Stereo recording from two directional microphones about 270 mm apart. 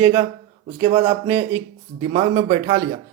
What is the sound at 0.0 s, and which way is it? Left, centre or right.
Speech, right.